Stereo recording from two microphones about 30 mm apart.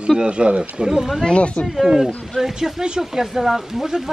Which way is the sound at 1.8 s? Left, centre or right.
Centre.